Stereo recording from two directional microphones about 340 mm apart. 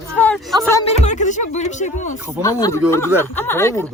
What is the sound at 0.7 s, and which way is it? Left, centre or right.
Fowl, centre.